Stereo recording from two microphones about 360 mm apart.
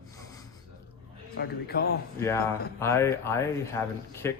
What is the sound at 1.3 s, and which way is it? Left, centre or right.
Speech, left.